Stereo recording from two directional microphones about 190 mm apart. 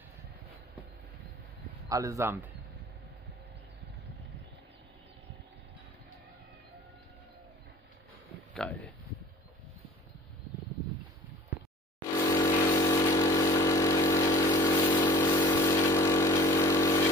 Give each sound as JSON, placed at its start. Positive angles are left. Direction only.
{"t": 1.9, "sound": "speech", "side_deg": -15}
{"t": 8.5, "sound": "a sound", "side_deg": 10}
{"t": 12.2, "sound": "vehicle", "side_deg": 20}